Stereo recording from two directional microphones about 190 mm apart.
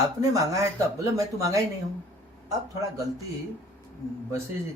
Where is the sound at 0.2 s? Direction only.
15° right (ahead or behind).